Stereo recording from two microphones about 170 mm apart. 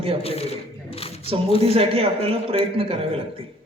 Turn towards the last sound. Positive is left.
turn(degrees=-35)  # may be behind; listen again after turning